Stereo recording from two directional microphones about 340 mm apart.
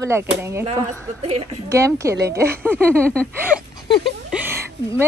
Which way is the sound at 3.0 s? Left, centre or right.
Centre.